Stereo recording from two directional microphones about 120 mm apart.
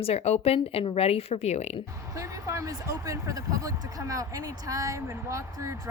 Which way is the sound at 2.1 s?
25° right (ahead or behind).